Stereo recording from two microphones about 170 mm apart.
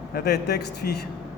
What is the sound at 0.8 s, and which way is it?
Speech, 60° left (ahead or behind).